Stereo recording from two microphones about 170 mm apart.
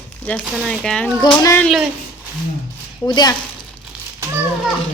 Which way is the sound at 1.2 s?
20° left (ahead or behind).